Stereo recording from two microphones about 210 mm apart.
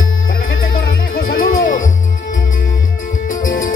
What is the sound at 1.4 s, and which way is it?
Music, 40° left (ahead or behind).